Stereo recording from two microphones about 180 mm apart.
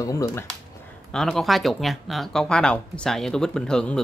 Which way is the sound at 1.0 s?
5° left (ahead or behind).